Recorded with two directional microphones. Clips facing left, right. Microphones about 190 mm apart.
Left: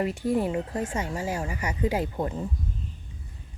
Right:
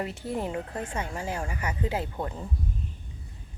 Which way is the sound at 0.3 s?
10° left (ahead or behind).